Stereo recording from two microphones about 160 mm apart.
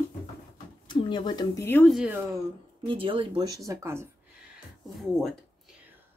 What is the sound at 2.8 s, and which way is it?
Speech, 35° right (ahead or behind).